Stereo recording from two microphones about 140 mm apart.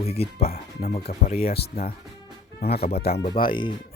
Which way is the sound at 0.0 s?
45° left (ahead or behind).